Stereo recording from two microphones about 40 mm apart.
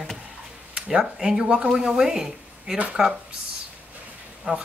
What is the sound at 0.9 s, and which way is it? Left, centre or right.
Speech, centre.